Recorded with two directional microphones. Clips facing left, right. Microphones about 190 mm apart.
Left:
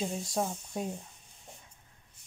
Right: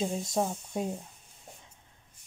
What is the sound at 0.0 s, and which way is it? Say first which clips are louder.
Speech: right 3 dB; 20° right (ahead or behind).